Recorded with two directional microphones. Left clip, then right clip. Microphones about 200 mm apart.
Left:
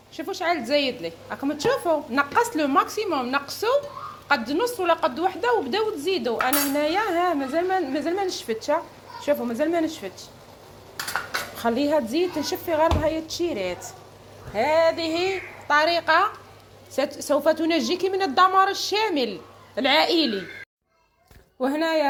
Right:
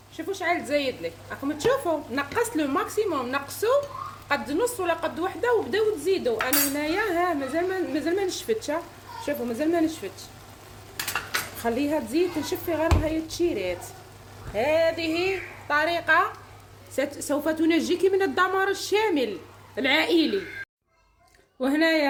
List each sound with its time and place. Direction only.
0.2 s a woman's voice: centre (ahead or behind)
11.6 s a woman's voice: 5° right (ahead or behind)
21.6 s speech: 10° left (ahead or behind)